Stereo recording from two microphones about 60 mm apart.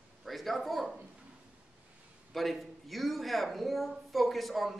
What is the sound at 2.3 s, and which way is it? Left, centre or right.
A woman's voice, centre.